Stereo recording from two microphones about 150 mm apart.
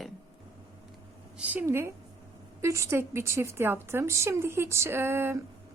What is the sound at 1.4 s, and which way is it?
A woman's voice, 10° right (ahead or behind).